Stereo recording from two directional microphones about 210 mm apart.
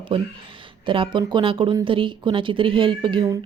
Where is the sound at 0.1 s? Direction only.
25° right (ahead or behind).